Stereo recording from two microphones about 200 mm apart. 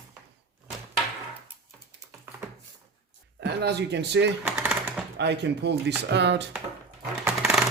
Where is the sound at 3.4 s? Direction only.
55° right (ahead or behind).